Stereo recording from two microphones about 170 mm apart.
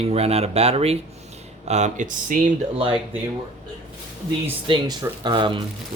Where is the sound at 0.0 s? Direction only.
35° right (ahead or behind).